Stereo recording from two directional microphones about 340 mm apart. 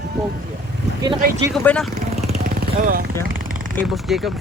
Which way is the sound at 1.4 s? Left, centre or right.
Centre.